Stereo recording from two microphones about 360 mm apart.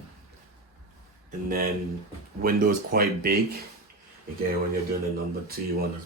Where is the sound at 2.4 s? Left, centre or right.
Right.